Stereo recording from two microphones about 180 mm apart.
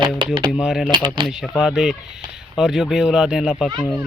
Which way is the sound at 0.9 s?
25° right (ahead or behind).